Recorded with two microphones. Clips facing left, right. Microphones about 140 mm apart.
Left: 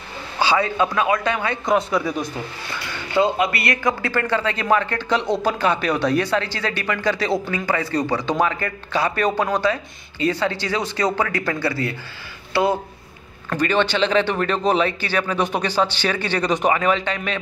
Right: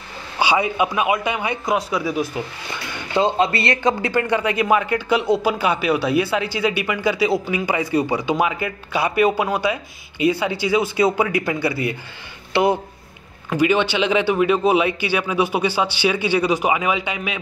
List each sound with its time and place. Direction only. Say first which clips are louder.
0.4 s a man's voice: even; 15° right (ahead or behind)
1.7 s speech: left 2 dB; 5° right (ahead or behind)
3.2 s a man's voice: right 1 dB; 25° right (ahead or behind); by 17.4 s 10° right (ahead or behind)